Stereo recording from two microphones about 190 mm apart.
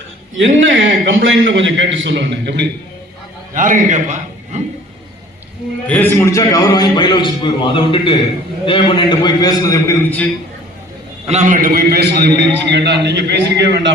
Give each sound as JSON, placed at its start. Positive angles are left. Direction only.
{"t": 0.3, "sound": "a man's voice", "side_deg": -75}
{"t": 3.5, "sound": "a man's voice", "side_deg": -45}
{"t": 5.9, "sound": "a man's voice", "side_deg": 10}
{"t": 11.3, "sound": "a man's voice", "side_deg": -40}